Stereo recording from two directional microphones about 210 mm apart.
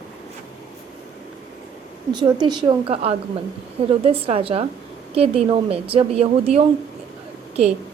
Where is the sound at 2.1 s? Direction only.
20° right (ahead or behind).